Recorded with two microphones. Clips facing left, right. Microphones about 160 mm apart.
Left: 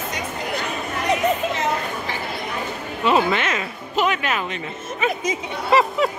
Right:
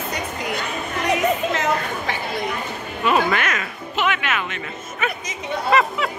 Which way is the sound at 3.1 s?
25° left (ahead or behind).